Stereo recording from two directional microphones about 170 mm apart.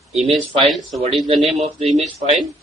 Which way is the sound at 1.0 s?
30° right (ahead or behind).